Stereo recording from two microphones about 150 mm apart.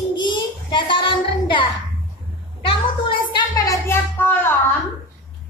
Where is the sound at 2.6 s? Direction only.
35° left (ahead or behind).